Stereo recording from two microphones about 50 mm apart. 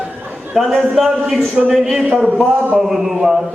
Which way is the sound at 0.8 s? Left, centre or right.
Centre.